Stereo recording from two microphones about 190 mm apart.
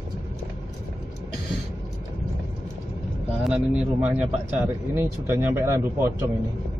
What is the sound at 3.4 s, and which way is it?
Speech, 5° right (ahead or behind).